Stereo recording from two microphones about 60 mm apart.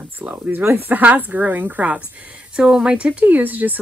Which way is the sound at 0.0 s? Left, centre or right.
Right.